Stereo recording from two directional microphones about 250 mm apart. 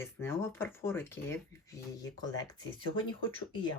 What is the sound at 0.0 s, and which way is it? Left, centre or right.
Speech, centre.